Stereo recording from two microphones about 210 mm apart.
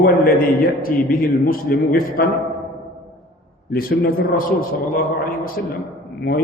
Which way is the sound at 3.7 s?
45° left (ahead or behind).